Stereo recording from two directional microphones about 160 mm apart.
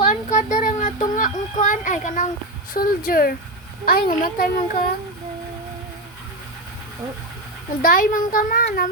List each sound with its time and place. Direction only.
0.1 s a sound: 50° left (ahead or behind)
2.7 s a child's voice: 60° left (ahead or behind)
7.8 s a child's voice: 60° left (ahead or behind)